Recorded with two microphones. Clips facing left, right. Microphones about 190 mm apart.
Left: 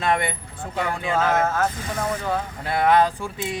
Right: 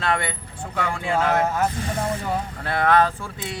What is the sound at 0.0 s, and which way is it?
Speech, 15° left (ahead or behind).